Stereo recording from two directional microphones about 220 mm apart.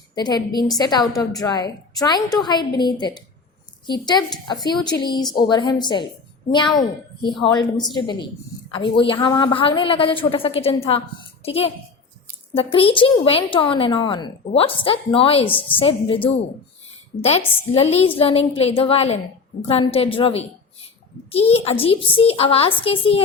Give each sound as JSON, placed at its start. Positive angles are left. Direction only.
{"t": 0.1, "sound": "a woman's voice", "side_deg": 20}
{"t": 3.8, "sound": "a woman's voice", "side_deg": 20}